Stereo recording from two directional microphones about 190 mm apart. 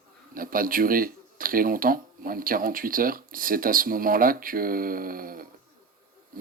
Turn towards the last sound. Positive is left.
turn(degrees=-50)  # may be behind; listen again after turning